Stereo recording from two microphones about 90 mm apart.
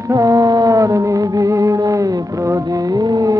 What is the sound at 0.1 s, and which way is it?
Music, 35° right (ahead or behind).